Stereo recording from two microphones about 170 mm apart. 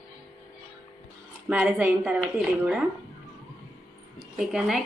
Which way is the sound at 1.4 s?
5° right (ahead or behind).